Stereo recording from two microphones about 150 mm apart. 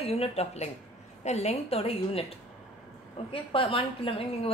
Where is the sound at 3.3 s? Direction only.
35° left (ahead or behind).